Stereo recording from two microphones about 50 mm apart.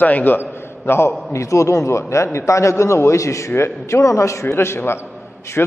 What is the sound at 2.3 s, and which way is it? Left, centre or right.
A man's voice, left.